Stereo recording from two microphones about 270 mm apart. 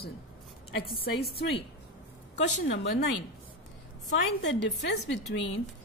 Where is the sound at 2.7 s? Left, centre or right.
Left.